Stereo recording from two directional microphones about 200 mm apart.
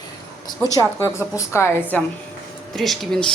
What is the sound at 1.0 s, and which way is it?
A woman's voice, 15° left (ahead or behind).